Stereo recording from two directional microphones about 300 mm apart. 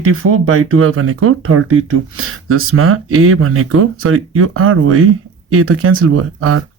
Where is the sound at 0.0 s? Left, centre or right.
Right.